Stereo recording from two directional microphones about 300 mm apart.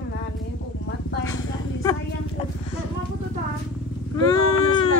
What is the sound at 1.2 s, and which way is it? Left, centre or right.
Vehicle, centre.